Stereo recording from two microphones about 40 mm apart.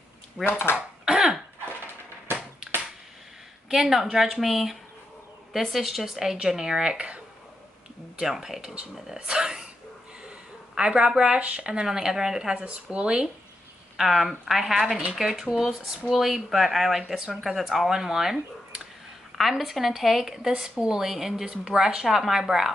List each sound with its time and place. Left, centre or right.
0.4 s speech: left
0.7 s throat clearing: centre
3.6 s a woman's voice: centre
6.5 s speech: centre
8.3 s a woman's voice: centre
10.7 s a woman's voice: centre
12.5 s speech: right
13.9 s a woman's voice: centre